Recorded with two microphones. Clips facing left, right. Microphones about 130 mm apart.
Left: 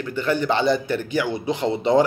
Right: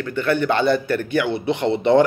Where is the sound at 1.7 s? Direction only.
15° left (ahead or behind).